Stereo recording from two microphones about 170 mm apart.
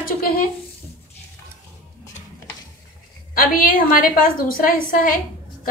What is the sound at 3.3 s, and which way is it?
A woman's voice, 55° left (ahead or behind).